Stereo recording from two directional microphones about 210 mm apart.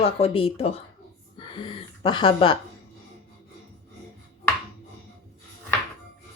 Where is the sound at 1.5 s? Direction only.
25° left (ahead or behind).